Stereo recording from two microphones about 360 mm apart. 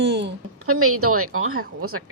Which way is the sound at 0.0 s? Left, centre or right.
Right.